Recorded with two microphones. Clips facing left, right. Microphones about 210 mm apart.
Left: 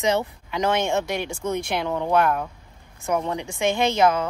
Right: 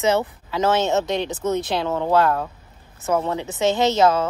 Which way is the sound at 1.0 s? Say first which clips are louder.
Right 4 dB; 20° right (ahead or behind).